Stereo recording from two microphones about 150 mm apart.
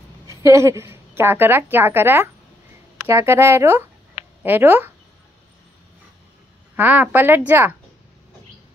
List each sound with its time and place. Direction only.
0.3 s a woman's voice: 20° right (ahead or behind)
6.8 s a woman's voice: 10° right (ahead or behind)